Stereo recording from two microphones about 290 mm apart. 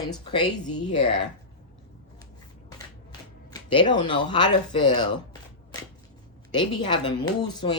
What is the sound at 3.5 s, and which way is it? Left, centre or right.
Speech, centre.